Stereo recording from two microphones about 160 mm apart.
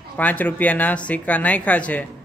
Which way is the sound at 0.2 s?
10° left (ahead or behind).